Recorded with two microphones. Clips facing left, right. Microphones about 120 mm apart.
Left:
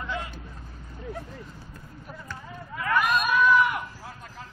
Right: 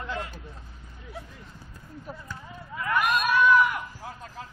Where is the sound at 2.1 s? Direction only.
30° right (ahead or behind).